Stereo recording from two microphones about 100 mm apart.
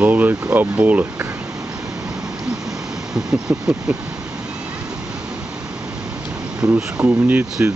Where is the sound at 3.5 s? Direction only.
15° right (ahead or behind).